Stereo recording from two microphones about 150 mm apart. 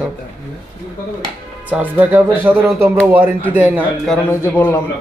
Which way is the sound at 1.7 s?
10° right (ahead or behind).